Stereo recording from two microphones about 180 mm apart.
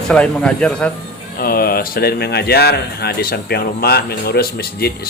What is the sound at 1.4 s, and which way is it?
Speech, 55° left (ahead or behind).